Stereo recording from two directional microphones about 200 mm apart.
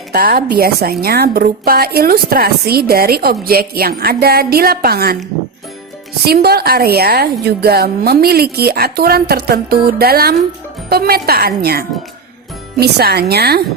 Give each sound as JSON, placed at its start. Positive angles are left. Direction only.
{"t": 0.1, "sound": "a woman's voice", "side_deg": -50}
{"t": 6.2, "sound": "a woman's voice", "side_deg": -50}